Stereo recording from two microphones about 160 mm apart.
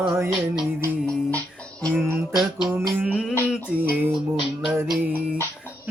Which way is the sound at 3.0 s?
5° right (ahead or behind).